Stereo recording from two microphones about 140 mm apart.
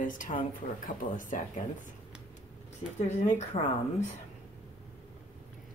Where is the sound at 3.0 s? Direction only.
60° left (ahead or behind).